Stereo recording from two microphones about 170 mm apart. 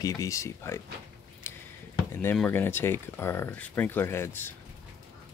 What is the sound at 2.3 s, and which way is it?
Speech, 10° left (ahead or behind).